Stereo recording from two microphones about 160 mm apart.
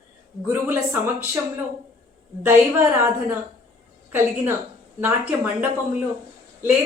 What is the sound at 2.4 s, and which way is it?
Speech, 15° right (ahead or behind).